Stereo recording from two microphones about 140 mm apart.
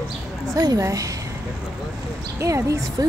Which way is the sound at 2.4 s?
20° right (ahead or behind).